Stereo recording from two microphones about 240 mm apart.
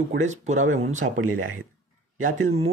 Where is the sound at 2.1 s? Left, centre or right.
Right.